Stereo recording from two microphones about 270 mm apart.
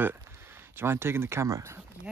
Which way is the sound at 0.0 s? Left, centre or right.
Centre.